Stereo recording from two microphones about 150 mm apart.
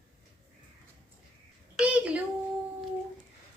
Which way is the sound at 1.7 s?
10° right (ahead or behind).